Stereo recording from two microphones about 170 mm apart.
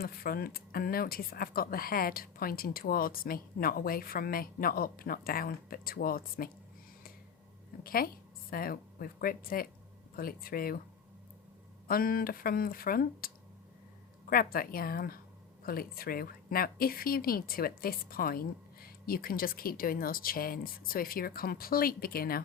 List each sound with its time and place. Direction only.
0.0 s speech: 60° left (ahead or behind)
7.9 s a woman's voice: 60° left (ahead or behind)
11.9 s speech: 60° left (ahead or behind)